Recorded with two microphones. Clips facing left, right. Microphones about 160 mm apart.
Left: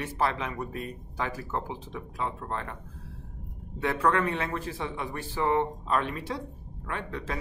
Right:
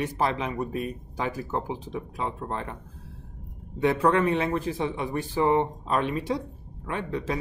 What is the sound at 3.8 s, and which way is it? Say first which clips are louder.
A man's voice: right 4 dB; 20° right (ahead or behind).